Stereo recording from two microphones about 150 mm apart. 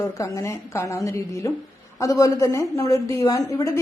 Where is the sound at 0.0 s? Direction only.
20° left (ahead or behind).